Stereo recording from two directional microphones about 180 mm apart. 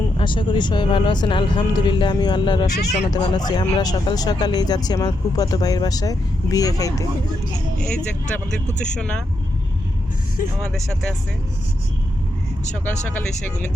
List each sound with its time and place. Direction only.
0.2 s speech: 25° left (ahead or behind)
2.6 s speech: 40° left (ahead or behind)
3.1 s speech: 20° left (ahead or behind)
7.8 s speech: 5° left (ahead or behind)
12.7 s speech: 10° left (ahead or behind)